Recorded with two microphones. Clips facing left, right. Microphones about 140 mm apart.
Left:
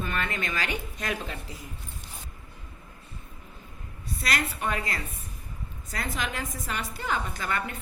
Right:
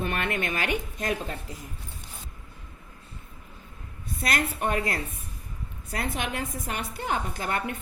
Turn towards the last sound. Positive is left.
turn(degrees=-55)  # may be behind; listen again after turning